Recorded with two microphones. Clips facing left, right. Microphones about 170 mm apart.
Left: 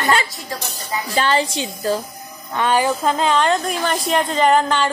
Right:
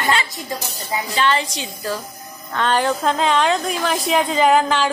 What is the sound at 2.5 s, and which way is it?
Speech, 10° left (ahead or behind).